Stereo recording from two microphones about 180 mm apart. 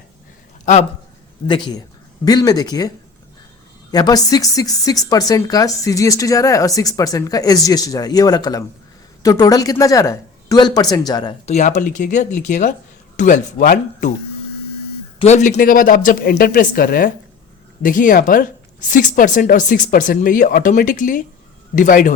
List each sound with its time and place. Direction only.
0.6 s speech: 40° left (ahead or behind)
1.5 s speech: 25° left (ahead or behind)
3.9 s speech: 20° left (ahead or behind)
11.4 s speech: 40° left (ahead or behind)
15.2 s speech: 40° left (ahead or behind)
15.5 s speech: 50° left (ahead or behind)